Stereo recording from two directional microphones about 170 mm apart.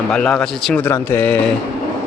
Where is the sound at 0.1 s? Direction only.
5° left (ahead or behind).